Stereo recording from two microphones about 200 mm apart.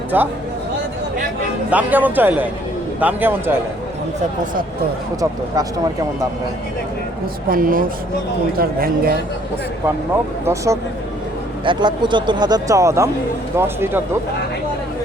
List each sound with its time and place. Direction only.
0.1 s a man's voice: 10° right (ahead or behind)
1.7 s a man's voice: 10° right (ahead or behind)
5.2 s speech: 20° right (ahead or behind)
7.5 s speech: 45° right (ahead or behind)
10.4 s a man's voice: 15° right (ahead or behind)